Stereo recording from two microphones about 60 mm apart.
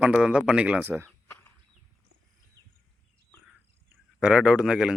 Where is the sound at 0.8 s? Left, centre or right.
Right.